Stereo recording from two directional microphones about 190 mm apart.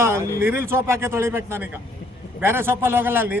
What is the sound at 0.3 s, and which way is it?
Speech, 15° right (ahead or behind).